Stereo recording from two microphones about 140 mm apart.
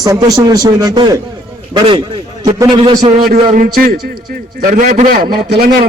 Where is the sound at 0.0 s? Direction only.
25° right (ahead or behind).